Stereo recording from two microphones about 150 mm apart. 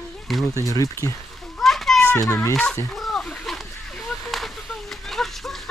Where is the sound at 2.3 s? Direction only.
20° left (ahead or behind).